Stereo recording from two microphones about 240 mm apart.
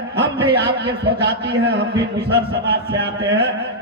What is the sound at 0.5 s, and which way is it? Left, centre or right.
A man's voice, right.